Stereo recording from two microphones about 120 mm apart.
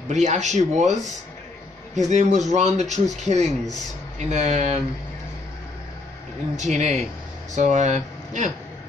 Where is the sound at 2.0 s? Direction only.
85° right.